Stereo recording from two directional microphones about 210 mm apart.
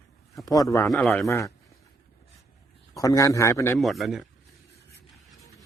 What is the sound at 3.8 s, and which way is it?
Speech, centre (ahead or behind).